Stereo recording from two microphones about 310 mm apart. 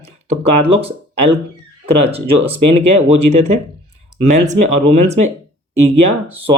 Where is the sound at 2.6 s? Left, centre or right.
Right.